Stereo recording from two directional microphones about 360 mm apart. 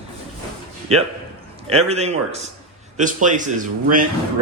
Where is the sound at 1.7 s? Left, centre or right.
Centre.